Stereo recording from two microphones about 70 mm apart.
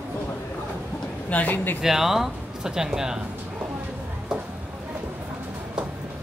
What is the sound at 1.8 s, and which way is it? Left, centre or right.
Speech, centre.